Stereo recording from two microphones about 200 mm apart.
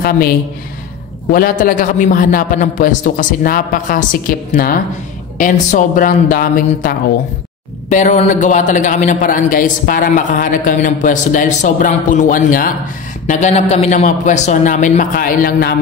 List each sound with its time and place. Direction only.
1.3 s a man's voice: 45° left (ahead or behind)